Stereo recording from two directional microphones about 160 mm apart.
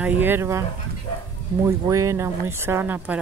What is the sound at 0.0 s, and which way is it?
Speech, 10° right (ahead or behind).